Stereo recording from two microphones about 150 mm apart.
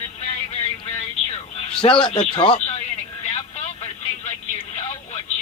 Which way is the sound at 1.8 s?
35° left (ahead or behind).